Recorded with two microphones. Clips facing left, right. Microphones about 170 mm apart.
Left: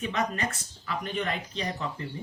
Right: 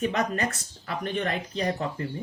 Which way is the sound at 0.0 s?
45° right (ahead or behind).